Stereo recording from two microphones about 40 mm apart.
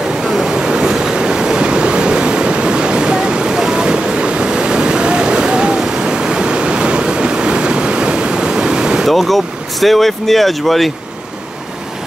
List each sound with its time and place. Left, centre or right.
0.2 s waves: centre
0.8 s train: centre
9.0 s speech: centre